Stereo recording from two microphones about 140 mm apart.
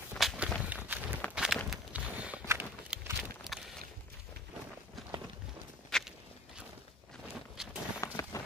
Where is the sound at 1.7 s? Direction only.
10° right (ahead or behind).